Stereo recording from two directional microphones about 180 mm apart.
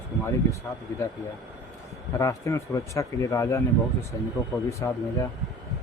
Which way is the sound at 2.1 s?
15° left (ahead or behind).